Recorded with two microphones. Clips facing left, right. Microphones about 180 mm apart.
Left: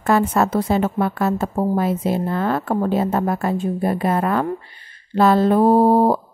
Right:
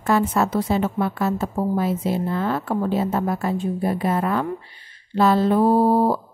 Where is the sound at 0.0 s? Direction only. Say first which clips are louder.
Left 2 dB; 55° left (ahead or behind).